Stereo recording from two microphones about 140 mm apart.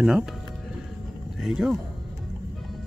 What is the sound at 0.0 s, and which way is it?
Speech, 5° right (ahead or behind).